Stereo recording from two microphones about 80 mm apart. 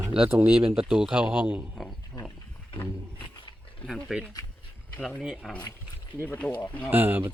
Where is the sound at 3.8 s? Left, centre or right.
Centre.